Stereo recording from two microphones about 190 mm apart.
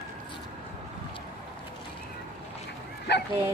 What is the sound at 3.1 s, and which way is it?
Bow-wow, 65° left (ahead or behind).